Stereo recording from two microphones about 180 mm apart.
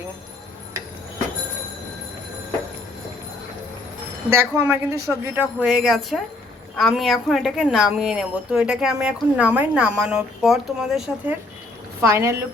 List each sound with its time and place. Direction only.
4.3 s a woman's voice: 10° right (ahead or behind)
12.0 s a woman's voice: 15° right (ahead or behind)